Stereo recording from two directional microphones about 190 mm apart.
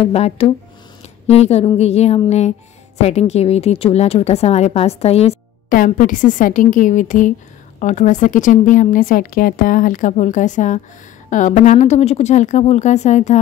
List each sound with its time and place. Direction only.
0.0 s a woman's voice: 30° left (ahead or behind)
5.7 s a woman's voice: 45° left (ahead or behind)